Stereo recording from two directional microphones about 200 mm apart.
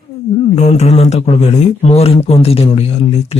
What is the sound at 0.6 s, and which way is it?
Speech, 35° left (ahead or behind).